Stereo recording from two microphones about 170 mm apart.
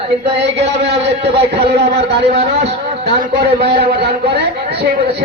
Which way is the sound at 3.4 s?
75° right (ahead or behind).